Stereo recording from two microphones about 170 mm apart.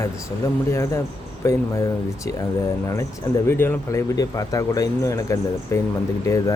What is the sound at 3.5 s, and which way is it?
Speech, 15° left (ahead or behind).